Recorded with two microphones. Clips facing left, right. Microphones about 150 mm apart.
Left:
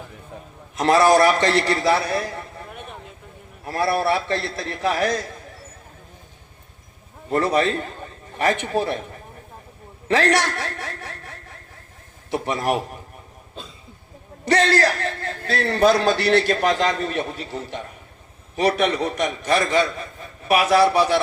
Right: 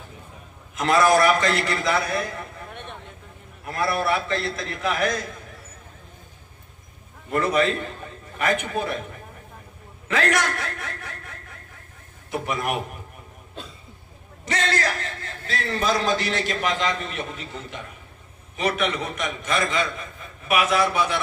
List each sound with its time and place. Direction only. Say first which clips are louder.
0.8 s a man's voice: left 3 dB; 30° left (ahead or behind)
3.7 s a man's voice: left 3 dB; 30° left (ahead or behind)
7.3 s a man's voice: left 2 dB; 35° left (ahead or behind)
10.1 s a man's voice: left 4 dB; 30° left (ahead or behind)
14.4 s a man's voice: left 8 dB; 35° left (ahead or behind)
15.2 s a man's voice: left 6 dB; 60° left (ahead or behind)
16.6 s a man's voice: left 5 dB; 40° left (ahead or behind)